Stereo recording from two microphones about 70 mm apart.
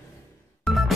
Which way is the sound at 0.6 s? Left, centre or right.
Centre.